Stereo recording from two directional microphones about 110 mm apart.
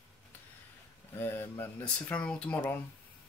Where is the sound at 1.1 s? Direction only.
20° left (ahead or behind).